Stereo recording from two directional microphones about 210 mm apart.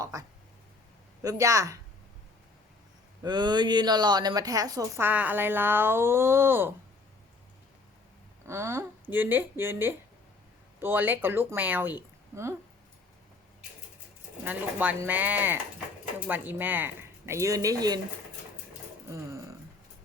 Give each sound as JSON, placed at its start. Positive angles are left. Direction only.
{"t": 0.0, "sound": "a sound", "side_deg": -15}
{"t": 1.2, "sound": "speech", "side_deg": -15}
{"t": 3.2, "sound": "speech", "side_deg": -20}
{"t": 8.4, "sound": "speech", "side_deg": -10}
{"t": 14.4, "sound": "speech", "side_deg": -5}